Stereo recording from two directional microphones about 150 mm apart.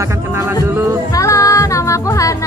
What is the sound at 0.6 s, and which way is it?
Music, 15° right (ahead or behind).